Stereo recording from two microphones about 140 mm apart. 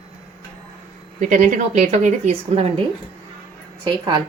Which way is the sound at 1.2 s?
65° right (ahead or behind).